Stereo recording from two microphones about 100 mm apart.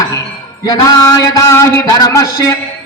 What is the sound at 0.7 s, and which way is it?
A man's voice, 40° left (ahead or behind).